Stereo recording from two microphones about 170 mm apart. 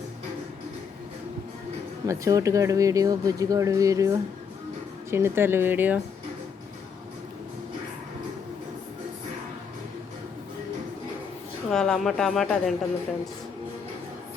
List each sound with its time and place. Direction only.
2.0 s speech: 20° right (ahead or behind)
11.7 s speech: 5° left (ahead or behind)